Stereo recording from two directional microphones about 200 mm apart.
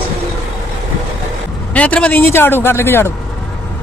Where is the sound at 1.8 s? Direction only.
5° left (ahead or behind).